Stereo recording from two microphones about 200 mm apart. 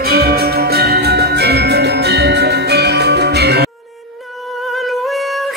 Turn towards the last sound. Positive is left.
turn(degrees=-55)  # may be behind; listen again after turning